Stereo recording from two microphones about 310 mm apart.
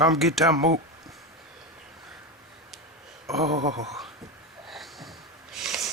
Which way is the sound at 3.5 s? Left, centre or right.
Right.